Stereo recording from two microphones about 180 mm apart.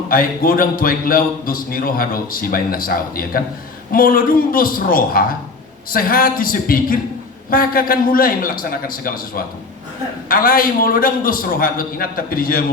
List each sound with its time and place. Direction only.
0.1 s a man's voice: 55° left (ahead or behind)